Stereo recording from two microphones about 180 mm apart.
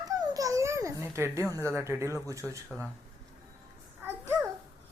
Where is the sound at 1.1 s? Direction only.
15° right (ahead or behind).